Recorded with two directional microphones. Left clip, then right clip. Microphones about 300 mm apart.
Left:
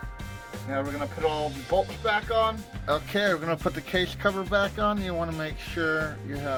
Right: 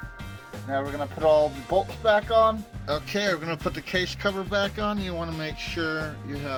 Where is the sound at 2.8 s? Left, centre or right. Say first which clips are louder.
Left 1 dB; centre.